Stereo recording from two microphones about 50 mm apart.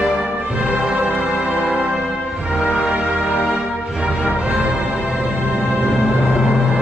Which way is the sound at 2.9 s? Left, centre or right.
Centre.